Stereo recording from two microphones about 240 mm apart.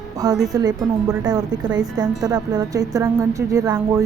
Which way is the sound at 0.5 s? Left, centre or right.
Centre.